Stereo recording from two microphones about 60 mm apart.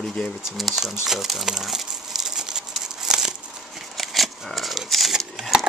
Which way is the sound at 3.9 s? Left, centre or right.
Centre.